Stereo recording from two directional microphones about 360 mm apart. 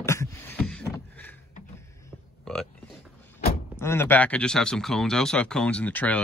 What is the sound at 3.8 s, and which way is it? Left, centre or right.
Speech, centre.